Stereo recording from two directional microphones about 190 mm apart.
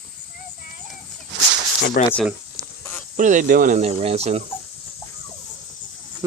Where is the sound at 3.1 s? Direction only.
40° right (ahead or behind).